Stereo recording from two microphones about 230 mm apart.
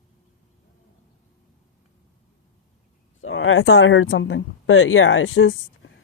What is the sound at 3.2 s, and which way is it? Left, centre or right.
Speech, left.